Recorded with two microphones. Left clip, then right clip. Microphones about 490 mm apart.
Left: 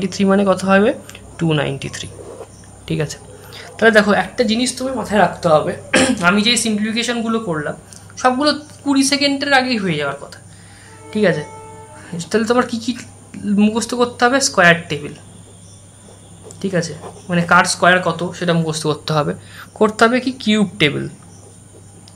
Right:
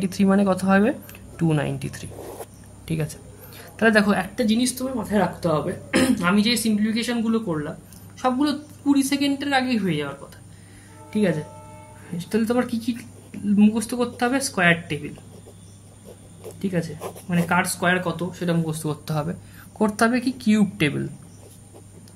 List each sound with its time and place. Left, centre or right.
0.0 s speech: right
16.6 s speech: right